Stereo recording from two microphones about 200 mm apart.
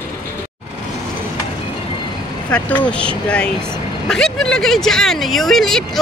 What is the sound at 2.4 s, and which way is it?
Speech, 10° left (ahead or behind).